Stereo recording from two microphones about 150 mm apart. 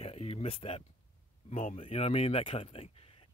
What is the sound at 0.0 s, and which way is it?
Speech, 40° left (ahead or behind).